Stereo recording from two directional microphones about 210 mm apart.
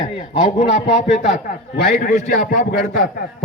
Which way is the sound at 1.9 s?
40° left (ahead or behind).